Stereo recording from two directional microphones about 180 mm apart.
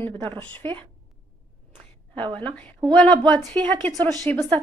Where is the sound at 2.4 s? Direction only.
5° left (ahead or behind).